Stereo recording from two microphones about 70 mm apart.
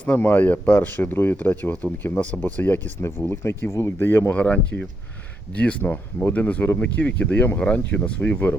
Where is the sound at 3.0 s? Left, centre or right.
Left.